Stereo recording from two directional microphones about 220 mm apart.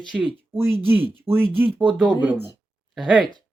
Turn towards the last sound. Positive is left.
turn(degrees=0)  # may be behind; listen again after turning